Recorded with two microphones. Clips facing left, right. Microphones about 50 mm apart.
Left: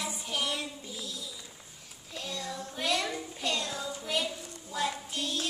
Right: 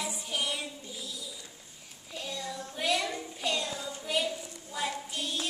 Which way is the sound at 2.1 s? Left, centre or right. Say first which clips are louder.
Even; centre.